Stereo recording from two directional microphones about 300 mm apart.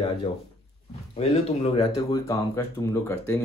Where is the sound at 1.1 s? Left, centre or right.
Centre.